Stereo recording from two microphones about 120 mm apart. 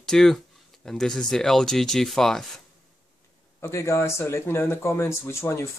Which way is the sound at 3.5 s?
20° left (ahead or behind).